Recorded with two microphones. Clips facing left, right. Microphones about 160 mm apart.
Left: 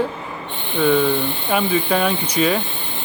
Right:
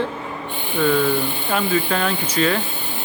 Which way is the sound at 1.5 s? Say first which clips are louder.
Left 2 dB; 10° left (ahead or behind).